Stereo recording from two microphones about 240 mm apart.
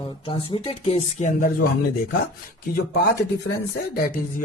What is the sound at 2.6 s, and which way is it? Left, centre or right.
Speech, left.